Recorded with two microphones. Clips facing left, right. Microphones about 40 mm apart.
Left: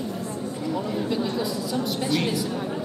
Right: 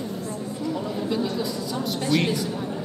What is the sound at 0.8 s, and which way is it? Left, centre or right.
A man's voice, centre.